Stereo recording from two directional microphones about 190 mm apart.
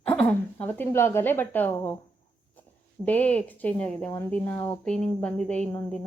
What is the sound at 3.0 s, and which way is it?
Speech, 10° left (ahead or behind).